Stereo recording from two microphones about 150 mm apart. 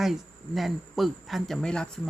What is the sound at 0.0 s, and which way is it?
Speech, centre (ahead or behind).